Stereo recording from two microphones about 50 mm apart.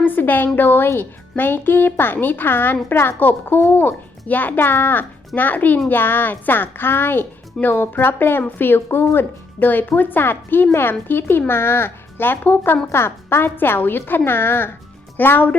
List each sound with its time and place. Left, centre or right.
0.0 s a woman's voice: left
2.9 s a woman's voice: left
3.2 s a child's voice: left
12.9 s a woman's voice: left
15.2 s a child's voice: left